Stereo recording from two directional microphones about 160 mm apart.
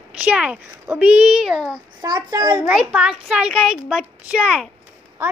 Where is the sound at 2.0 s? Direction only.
25° right (ahead or behind).